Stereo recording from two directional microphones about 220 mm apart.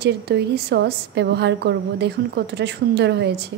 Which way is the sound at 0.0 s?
50° right (ahead or behind).